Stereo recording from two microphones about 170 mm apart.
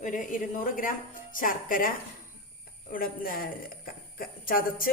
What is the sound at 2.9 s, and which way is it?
A woman's voice, 55° left (ahead or behind).